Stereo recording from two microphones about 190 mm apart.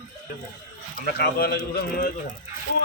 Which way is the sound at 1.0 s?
55° left (ahead or behind).